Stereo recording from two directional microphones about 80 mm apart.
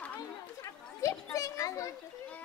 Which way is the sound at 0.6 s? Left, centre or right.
Left.